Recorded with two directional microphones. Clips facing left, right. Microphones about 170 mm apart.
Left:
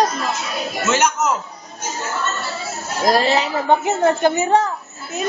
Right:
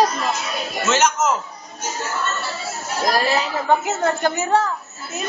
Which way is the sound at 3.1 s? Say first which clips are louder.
Left 4 dB; 25° left (ahead or behind).